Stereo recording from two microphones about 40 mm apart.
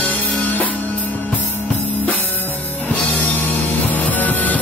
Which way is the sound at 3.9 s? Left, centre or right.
Left.